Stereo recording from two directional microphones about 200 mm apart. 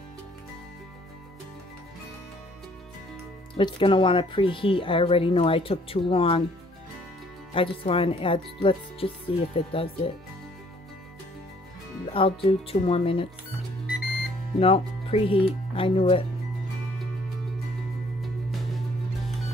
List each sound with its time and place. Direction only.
3.5 s speech: 25° left (ahead or behind)
7.5 s speech: 25° left (ahead or behind)
12.1 s speech: 25° left (ahead or behind)
14.6 s speech: 30° left (ahead or behind)
18.2 s music: centre (ahead or behind)